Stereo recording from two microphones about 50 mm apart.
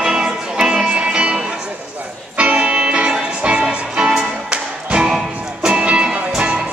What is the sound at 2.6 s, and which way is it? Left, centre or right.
Music, centre.